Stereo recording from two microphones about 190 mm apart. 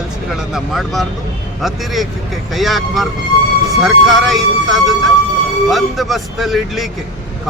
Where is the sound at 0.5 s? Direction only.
Centre (ahead or behind).